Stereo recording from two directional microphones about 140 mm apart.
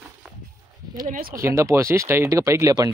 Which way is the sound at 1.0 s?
65° right (ahead or behind).